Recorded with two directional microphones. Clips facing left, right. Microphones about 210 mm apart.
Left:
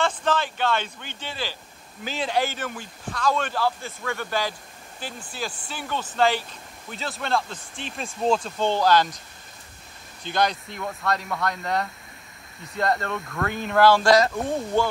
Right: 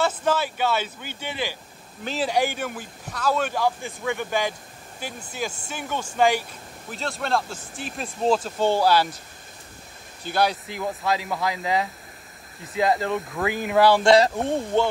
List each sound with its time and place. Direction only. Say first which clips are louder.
0.0 s speech: right 1 dB; 10° right (ahead or behind)
6.9 s speech: right 1 dB; centre (ahead or behind)
10.2 s speech: right 1 dB; 5° right (ahead or behind)
14.1 s speech: right 2 dB; 25° right (ahead or behind)